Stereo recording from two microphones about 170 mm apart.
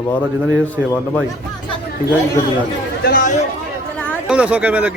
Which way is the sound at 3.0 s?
50° left (ahead or behind).